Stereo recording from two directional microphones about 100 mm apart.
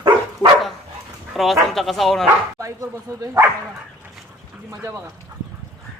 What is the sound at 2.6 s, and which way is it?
Speech, 35° right (ahead or behind).